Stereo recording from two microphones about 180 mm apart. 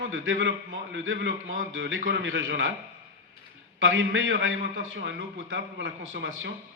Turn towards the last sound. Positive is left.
turn(degrees=-90)